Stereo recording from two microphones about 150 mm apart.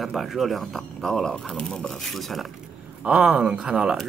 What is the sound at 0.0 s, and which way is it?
Speech, centre (ahead or behind).